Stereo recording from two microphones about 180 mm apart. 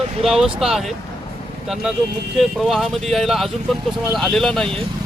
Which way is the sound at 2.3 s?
Centre (ahead or behind).